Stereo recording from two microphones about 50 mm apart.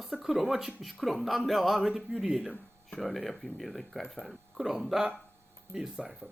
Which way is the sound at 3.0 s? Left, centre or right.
Centre.